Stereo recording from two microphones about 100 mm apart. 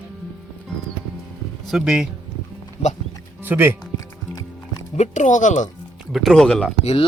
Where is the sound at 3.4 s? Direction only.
20° right (ahead or behind).